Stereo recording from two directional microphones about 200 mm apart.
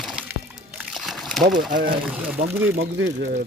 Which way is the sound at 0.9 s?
Centre (ahead or behind).